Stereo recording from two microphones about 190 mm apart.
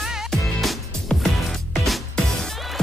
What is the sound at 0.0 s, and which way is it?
Music, centre (ahead or behind).